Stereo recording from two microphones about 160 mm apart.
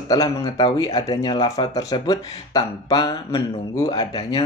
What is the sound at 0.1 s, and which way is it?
Speech, 25° left (ahead or behind).